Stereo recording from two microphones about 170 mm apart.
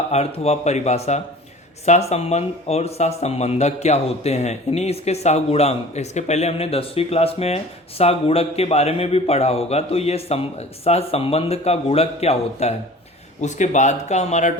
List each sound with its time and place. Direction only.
0.1 s speech: 40° left (ahead or behind)